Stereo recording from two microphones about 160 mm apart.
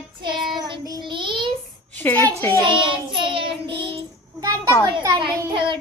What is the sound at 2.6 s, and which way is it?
Child singing, 30° right (ahead or behind).